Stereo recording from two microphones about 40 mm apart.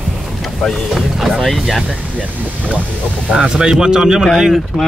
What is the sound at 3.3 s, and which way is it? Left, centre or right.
A man's voice, centre.